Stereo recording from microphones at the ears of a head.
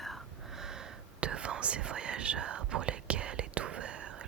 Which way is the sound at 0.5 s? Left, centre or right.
Right.